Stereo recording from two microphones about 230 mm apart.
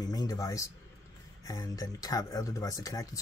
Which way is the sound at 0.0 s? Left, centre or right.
Centre.